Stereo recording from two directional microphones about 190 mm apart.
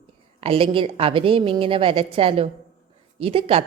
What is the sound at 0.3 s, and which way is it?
A woman's voice, 30° right (ahead or behind).